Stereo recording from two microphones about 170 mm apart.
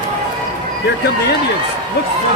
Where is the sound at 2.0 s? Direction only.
75° left (ahead or behind).